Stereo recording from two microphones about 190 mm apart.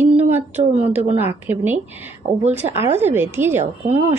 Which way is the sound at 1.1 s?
10° right (ahead or behind).